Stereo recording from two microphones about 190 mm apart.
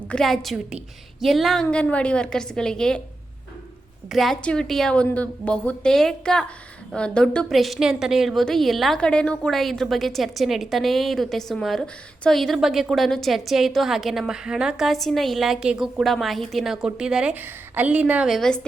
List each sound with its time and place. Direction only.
0.1 s a woman's voice: centre (ahead or behind)
4.1 s a woman's voice: centre (ahead or behind)